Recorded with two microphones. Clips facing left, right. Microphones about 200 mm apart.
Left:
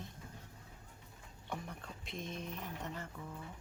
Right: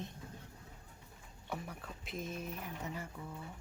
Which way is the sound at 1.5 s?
5° right (ahead or behind).